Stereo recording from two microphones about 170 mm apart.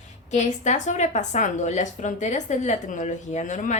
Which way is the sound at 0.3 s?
45° left (ahead or behind).